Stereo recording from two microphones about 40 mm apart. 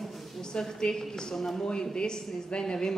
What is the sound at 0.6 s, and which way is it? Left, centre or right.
A woman's voice, centre.